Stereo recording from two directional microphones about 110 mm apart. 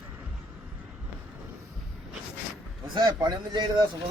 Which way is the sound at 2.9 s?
40° right (ahead or behind).